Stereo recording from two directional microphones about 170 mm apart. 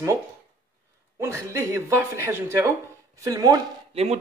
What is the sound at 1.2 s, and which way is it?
Speech, 15° right (ahead or behind).